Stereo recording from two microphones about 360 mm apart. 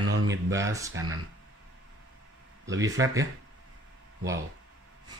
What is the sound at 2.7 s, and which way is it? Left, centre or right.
Speech, centre.